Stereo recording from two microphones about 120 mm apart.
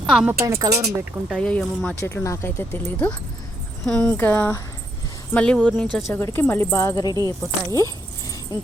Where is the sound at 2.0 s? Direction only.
20° left (ahead or behind).